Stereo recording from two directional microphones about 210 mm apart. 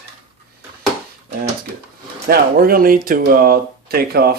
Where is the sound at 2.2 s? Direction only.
45° right (ahead or behind).